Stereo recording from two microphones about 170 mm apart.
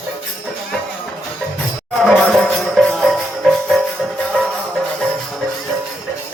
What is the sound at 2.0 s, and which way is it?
Music, centre (ahead or behind).